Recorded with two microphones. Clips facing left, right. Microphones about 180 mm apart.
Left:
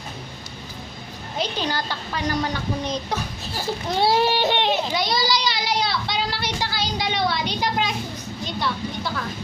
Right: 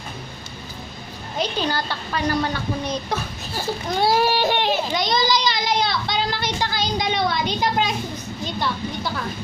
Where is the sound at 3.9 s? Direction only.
25° left (ahead or behind).